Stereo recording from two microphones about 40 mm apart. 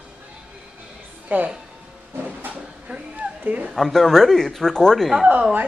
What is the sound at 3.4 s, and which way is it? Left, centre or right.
Speech, right.